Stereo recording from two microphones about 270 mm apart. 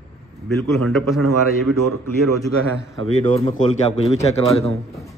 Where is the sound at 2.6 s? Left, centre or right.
Right.